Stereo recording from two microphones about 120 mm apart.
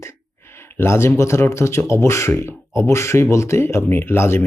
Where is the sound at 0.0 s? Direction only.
20° left (ahead or behind).